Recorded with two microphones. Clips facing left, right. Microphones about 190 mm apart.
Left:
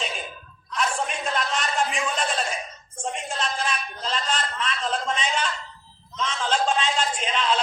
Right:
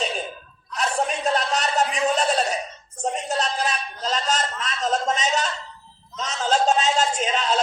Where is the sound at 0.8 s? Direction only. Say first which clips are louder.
Right 3 dB; 40° right (ahead or behind).